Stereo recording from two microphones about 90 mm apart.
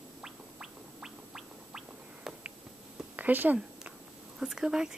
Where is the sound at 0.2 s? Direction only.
5° right (ahead or behind).